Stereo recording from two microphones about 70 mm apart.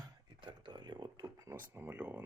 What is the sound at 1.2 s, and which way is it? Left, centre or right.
Speech, right.